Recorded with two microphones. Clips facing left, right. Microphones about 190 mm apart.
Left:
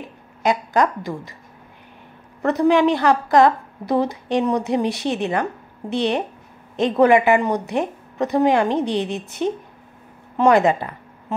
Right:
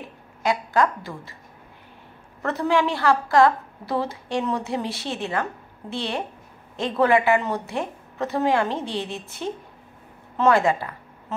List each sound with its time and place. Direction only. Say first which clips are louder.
0.4 s speech: left 3 dB; 20° left (ahead or behind)
2.4 s a woman's voice: left 6 dB; 15° left (ahead or behind)